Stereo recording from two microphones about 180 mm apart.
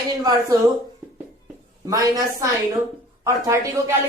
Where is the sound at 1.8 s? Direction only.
20° right (ahead or behind).